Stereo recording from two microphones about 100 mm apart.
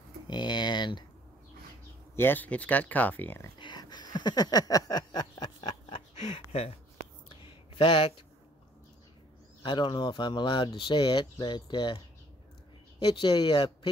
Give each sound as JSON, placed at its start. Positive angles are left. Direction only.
{"t": 0.3, "sound": "a sound", "side_deg": 50}
{"t": 2.1, "sound": "speech", "side_deg": 20}
{"t": 3.5, "sound": "a sound", "side_deg": 50}
{"t": 7.7, "sound": "speech", "side_deg": 55}
{"t": 9.6, "sound": "speech", "side_deg": 50}
{"t": 13.0, "sound": "speech", "side_deg": 50}